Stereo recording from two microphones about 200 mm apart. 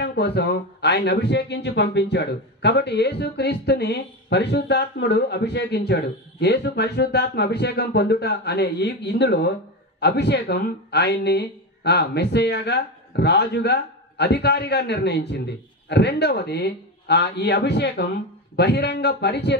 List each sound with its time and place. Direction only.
0.0 s speech: 55° left (ahead or behind)